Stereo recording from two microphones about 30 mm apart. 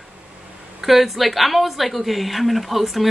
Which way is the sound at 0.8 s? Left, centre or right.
Centre.